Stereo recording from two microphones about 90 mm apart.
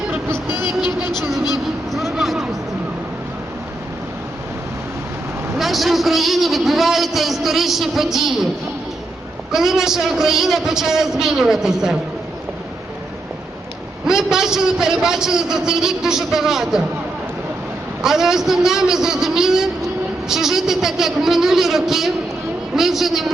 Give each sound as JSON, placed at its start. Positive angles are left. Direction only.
{"t": 0.6, "sound": "vehicle", "side_deg": 50}
{"t": 1.9, "sound": "a sound", "side_deg": 0}
{"t": 5.5, "sound": "a man's voice", "side_deg": 0}
{"t": 9.5, "sound": "a man's voice", "side_deg": -5}
{"t": 14.1, "sound": "a man's voice", "side_deg": -5}
{"t": 18.0, "sound": "a man's voice", "side_deg": -5}